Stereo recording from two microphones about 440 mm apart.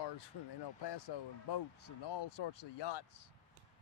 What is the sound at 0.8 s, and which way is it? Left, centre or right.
Speech, left.